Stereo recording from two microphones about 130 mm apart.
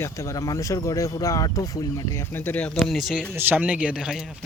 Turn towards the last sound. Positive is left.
turn(degrees=-5)  # may be behind; listen again after turning